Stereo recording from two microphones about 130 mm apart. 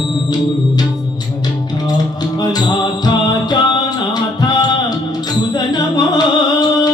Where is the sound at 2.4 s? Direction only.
30° left (ahead or behind).